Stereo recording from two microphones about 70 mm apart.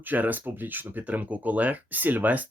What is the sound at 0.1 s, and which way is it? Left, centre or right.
Speech, right.